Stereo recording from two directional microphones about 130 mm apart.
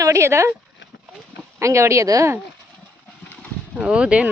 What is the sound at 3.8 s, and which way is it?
Speech, 10° right (ahead or behind).